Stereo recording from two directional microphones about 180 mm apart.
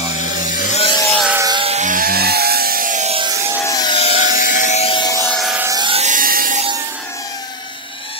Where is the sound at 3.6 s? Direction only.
20° left (ahead or behind).